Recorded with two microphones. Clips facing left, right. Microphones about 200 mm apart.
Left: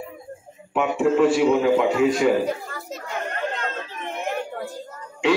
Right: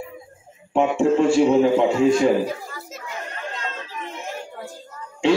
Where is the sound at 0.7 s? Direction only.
30° right (ahead or behind).